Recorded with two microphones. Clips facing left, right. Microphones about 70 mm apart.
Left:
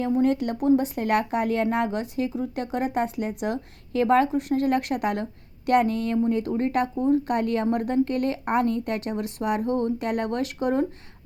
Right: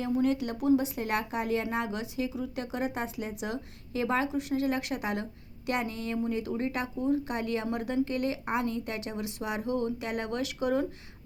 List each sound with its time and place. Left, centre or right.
0.0 s speech: left